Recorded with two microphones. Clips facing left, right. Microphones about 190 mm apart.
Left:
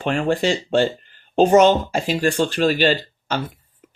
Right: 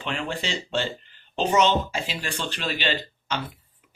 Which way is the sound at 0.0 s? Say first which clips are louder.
Left 10 dB; 50° left (ahead or behind).